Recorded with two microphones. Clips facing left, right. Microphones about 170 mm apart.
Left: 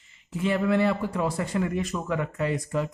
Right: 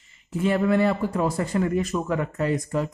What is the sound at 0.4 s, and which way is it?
A man's voice, 45° right (ahead or behind).